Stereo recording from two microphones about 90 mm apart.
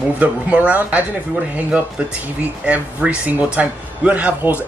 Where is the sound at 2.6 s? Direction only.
15° right (ahead or behind).